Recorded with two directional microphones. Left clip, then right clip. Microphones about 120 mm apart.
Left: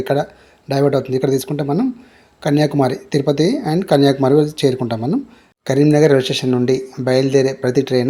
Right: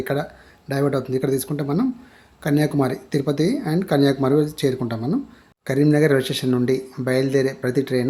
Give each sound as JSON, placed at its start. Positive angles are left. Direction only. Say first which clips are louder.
{"t": 0.0, "sound": "speech", "louder": "left 6 dB", "side_deg": 20}